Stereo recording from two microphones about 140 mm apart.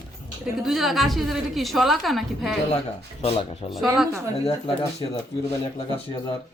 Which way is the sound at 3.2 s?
45° left (ahead or behind).